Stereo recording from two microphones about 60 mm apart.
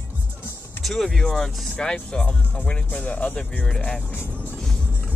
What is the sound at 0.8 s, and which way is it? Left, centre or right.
Speech, centre.